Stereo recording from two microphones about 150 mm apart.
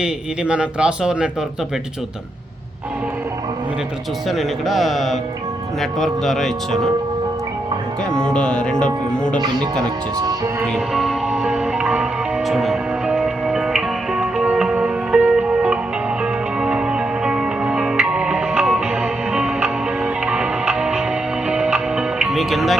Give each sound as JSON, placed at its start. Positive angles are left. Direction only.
{"t": 0.0, "sound": "speech", "side_deg": -5}
{"t": 4.3, "sound": "music", "side_deg": 0}
{"t": 8.1, "sound": "speech", "side_deg": 5}
{"t": 10.2, "sound": "music", "side_deg": -25}
{"t": 10.7, "sound": "music", "side_deg": 0}